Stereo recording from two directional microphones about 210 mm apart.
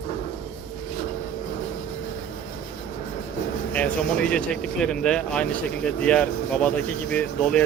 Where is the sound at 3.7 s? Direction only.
5° left (ahead or behind).